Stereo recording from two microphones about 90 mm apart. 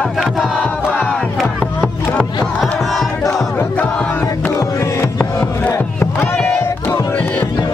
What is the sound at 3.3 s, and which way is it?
Battle cry, 30° left (ahead or behind).